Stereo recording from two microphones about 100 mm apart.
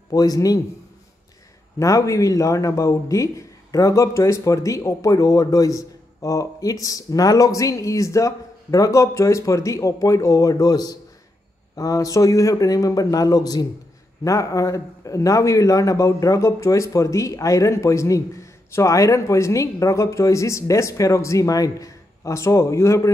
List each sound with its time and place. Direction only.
0.1 s speech: 40° left (ahead or behind)
1.8 s speech: 30° left (ahead or behind)